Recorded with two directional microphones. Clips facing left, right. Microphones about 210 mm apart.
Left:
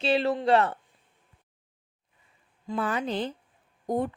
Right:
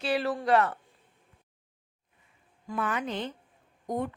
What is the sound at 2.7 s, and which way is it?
Speech, 30° left (ahead or behind).